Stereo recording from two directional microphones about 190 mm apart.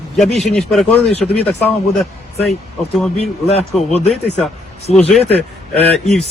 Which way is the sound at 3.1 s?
30° left (ahead or behind).